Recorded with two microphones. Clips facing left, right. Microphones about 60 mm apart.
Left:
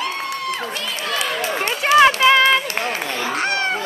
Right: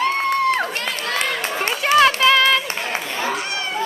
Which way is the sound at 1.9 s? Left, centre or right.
Centre.